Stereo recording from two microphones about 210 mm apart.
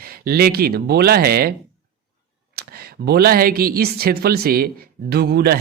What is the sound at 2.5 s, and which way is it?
Speech, 50° right (ahead or behind).